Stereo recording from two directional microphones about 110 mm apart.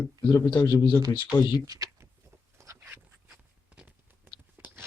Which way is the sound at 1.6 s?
35° right (ahead or behind).